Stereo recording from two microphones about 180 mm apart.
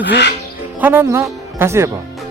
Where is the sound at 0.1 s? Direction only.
70° left (ahead or behind).